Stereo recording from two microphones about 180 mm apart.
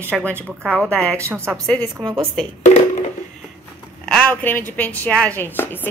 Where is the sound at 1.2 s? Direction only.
10° right (ahead or behind).